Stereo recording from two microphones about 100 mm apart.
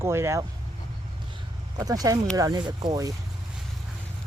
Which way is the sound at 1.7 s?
35° right (ahead or behind).